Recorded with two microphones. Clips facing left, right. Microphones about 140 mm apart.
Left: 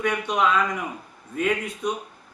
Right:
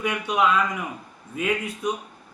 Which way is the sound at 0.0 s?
5° right (ahead or behind).